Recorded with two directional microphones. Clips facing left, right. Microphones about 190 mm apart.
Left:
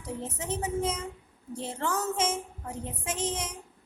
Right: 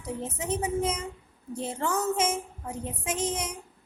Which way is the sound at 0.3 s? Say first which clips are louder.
Right 3 dB; 15° right (ahead or behind).